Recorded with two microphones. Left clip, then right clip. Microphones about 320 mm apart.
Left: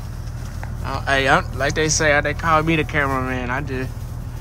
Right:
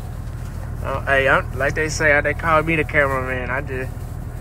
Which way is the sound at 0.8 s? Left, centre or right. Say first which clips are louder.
Right 1 dB; centre.